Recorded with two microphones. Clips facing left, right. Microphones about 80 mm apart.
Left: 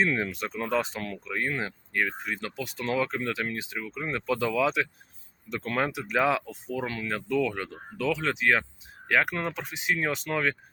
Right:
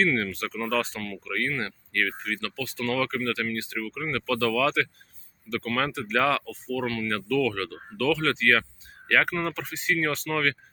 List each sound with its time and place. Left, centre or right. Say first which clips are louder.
0.0 s speech: right 2 dB; centre
7.1 s speech: right 1 dB; centre